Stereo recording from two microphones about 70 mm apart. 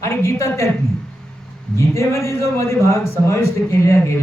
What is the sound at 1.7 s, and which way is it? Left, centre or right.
A man's voice, left.